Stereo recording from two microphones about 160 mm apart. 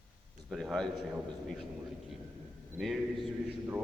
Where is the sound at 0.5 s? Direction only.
5° left (ahead or behind).